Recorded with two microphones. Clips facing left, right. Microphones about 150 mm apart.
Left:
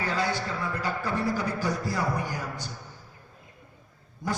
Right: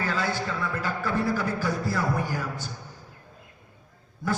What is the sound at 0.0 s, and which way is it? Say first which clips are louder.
A man's voice: even; 15° left (ahead or behind).